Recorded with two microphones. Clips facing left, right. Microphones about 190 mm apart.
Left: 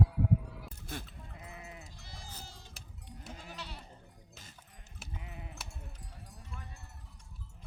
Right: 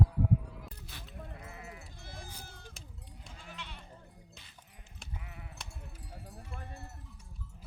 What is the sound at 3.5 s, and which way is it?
Goat, 40° left (ahead or behind).